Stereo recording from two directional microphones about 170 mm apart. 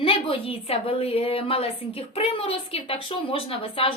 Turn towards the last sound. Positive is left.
turn(degrees=35)  # may be behind; listen again after turning